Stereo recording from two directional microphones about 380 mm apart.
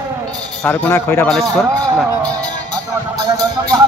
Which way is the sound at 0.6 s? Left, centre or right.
Centre.